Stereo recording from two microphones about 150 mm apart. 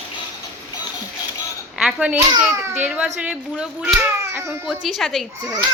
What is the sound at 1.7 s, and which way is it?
Speech, 5° right (ahead or behind).